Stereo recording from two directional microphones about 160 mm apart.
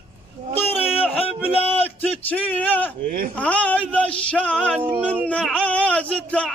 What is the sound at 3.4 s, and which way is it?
Music, 10° left (ahead or behind).